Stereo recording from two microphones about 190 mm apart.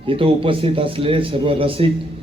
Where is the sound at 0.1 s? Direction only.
30° right (ahead or behind).